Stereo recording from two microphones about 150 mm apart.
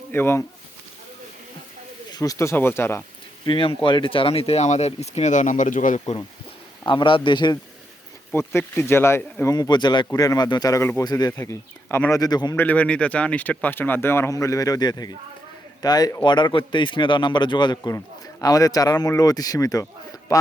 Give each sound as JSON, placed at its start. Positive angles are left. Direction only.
{"t": 0.1, "sound": "speech", "side_deg": 15}
{"t": 2.0, "sound": "speech", "side_deg": 25}
{"t": 3.4, "sound": "speech", "side_deg": 35}
{"t": 6.8, "sound": "a man's voice", "side_deg": 35}
{"t": 8.3, "sound": "speech", "side_deg": 15}
{"t": 12.2, "sound": "speech", "side_deg": 25}
{"t": 12.5, "sound": "speech", "side_deg": 10}